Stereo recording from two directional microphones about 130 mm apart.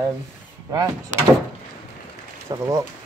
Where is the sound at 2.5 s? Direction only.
25° right (ahead or behind).